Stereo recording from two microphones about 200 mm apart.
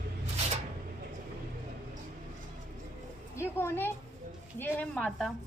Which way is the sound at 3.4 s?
10° left (ahead or behind).